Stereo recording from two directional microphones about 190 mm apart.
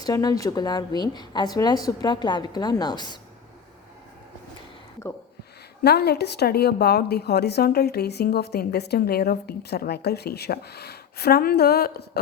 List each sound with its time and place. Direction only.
0.0 s a woman's voice: 20° left (ahead or behind)
5.8 s a woman's voice: 60° left (ahead or behind)